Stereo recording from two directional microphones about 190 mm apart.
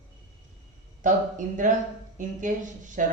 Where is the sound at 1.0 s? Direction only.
40° right (ahead or behind).